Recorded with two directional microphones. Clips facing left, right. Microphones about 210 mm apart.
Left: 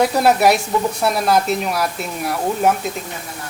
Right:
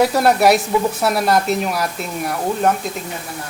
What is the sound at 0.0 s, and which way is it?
Speech, centre (ahead or behind).